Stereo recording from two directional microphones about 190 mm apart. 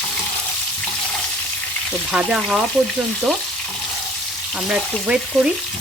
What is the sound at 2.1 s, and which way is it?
Frying, 5° right (ahead or behind).